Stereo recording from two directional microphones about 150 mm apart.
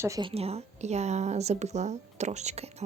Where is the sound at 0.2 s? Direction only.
40° right (ahead or behind).